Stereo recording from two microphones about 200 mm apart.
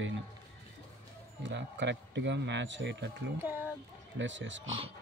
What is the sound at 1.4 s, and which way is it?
Speech, 65° right (ahead or behind).